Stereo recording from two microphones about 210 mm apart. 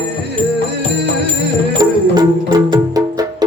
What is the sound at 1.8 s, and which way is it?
Music, 20° right (ahead or behind).